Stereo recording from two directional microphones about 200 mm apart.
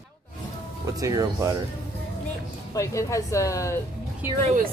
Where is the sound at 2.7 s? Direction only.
15° left (ahead or behind).